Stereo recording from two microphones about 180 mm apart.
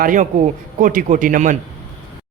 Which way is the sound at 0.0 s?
45° right (ahead or behind).